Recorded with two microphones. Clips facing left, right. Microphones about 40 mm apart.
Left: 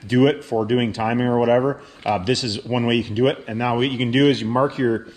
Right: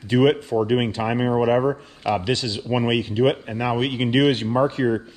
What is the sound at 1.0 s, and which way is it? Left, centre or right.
Speech, centre.